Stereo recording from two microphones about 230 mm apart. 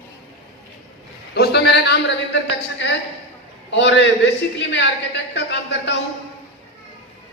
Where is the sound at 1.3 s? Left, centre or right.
Left.